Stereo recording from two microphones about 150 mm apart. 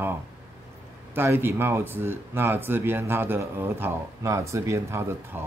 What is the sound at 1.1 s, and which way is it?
Speech, 15° right (ahead or behind).